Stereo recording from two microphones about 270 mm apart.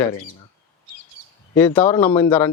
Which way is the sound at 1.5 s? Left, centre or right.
Centre.